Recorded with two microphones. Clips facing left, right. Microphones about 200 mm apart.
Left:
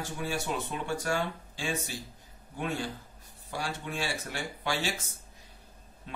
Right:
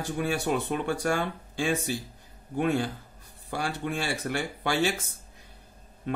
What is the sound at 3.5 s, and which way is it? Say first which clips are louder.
Speech: right 5 dB; 60° right (ahead or behind).